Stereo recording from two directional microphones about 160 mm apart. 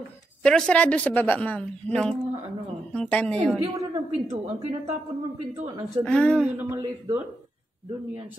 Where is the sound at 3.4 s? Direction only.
20° right (ahead or behind).